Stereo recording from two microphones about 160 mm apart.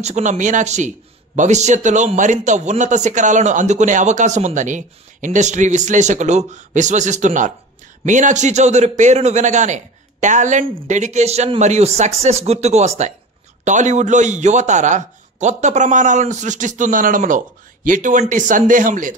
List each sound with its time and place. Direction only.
0.0 s a man's voice: 50° right (ahead or behind)